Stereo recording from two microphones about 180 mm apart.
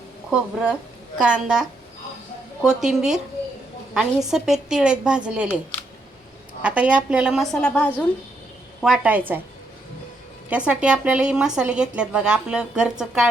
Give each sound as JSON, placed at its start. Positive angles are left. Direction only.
{"t": 0.3, "sound": "speech", "side_deg": -5}
{"t": 2.6, "sound": "speech", "side_deg": -5}
{"t": 6.6, "sound": "speech", "side_deg": -5}
{"t": 8.8, "sound": "a woman's voice", "side_deg": -5}
{"t": 10.5, "sound": "speech", "side_deg": -5}